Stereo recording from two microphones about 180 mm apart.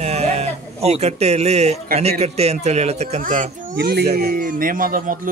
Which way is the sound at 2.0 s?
35° right (ahead or behind).